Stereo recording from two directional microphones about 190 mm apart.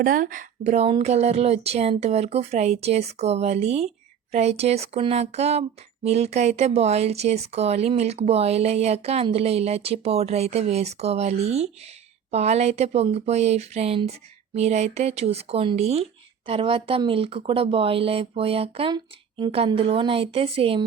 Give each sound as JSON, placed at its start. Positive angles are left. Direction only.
{"t": 0.0, "sound": "speech", "side_deg": -45}